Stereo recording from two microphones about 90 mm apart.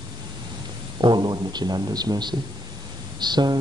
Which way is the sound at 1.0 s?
50° right (ahead or behind).